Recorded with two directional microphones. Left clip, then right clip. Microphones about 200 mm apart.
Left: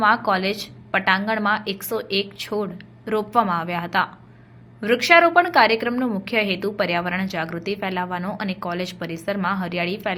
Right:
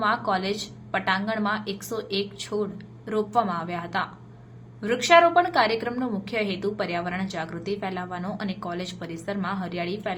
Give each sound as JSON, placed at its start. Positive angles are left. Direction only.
{"t": 0.0, "sound": "a woman's voice", "side_deg": 25}